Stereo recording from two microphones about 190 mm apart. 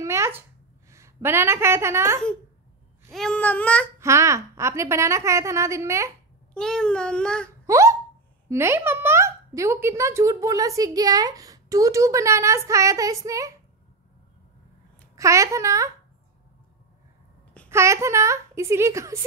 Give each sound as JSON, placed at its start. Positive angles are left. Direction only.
{"t": 0.0, "sound": "a sound", "side_deg": -15}
{"t": 0.8, "sound": "a woman's voice", "side_deg": -15}
{"t": 3.1, "sound": "babbling", "side_deg": 5}
{"t": 4.0, "sound": "speech", "side_deg": -15}
{"t": 6.5, "sound": "babbling", "side_deg": 5}
{"t": 7.6, "sound": "hiccup", "side_deg": -15}
{"t": 8.5, "sound": "speech", "side_deg": -15}
{"t": 15.1, "sound": "speech", "side_deg": -15}
{"t": 17.6, "sound": "speech", "side_deg": -15}